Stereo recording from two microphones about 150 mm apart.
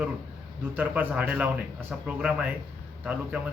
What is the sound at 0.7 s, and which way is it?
Speech, 10° right (ahead or behind).